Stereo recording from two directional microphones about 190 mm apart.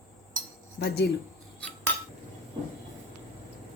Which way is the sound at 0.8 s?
55° left (ahead or behind).